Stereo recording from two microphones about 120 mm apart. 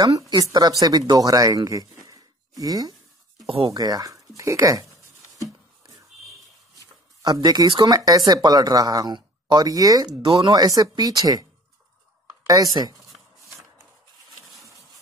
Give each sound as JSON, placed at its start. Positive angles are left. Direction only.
{"t": 0.3, "sound": "speech", "side_deg": -35}
{"t": 3.4, "sound": "speech", "side_deg": -50}
{"t": 3.7, "sound": "speech", "side_deg": -30}
{"t": 7.2, "sound": "speech", "side_deg": -30}
{"t": 12.4, "sound": "speech", "side_deg": -30}